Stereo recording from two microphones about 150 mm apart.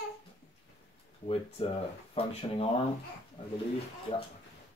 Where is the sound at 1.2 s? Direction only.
40° left (ahead or behind).